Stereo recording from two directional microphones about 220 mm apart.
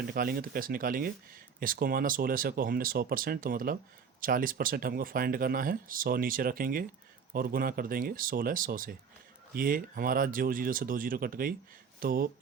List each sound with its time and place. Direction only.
0.1 s speech: 40° right (ahead or behind)